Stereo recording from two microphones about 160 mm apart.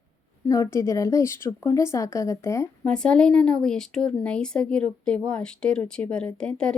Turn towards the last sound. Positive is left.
turn(degrees=5)  # may be behind; listen again after turning